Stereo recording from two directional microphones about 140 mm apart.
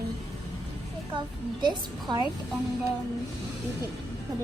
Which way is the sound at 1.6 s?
30° right (ahead or behind).